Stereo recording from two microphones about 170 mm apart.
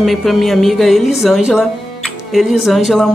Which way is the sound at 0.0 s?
Centre (ahead or behind).